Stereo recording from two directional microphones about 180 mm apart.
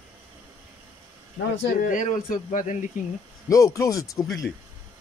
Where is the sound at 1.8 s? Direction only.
45° left (ahead or behind).